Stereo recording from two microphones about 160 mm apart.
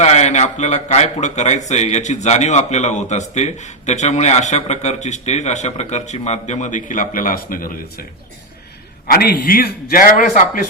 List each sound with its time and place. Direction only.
0.0 s a man's voice: 45° left (ahead or behind); by 8.0 s 60° left (ahead or behind)
9.0 s a man's voice: 75° left (ahead or behind); by 10.7 s 60° left (ahead or behind)